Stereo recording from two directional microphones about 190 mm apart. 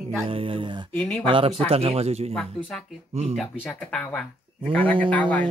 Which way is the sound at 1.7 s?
30° right (ahead or behind).